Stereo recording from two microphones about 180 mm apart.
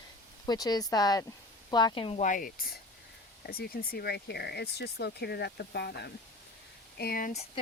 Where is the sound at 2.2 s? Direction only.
50° left (ahead or behind); by 6.1 s 65° left (ahead or behind).